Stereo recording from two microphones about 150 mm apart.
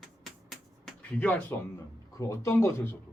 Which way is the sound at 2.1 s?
20° left (ahead or behind).